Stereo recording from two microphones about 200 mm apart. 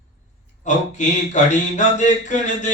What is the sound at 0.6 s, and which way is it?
Speech, 35° left (ahead or behind).